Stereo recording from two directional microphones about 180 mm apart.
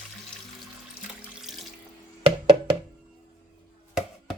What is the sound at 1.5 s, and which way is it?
Sink, centre (ahead or behind).